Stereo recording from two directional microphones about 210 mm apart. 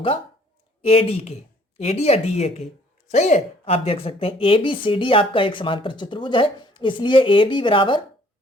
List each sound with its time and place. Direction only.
0.8 s speech: 25° left (ahead or behind)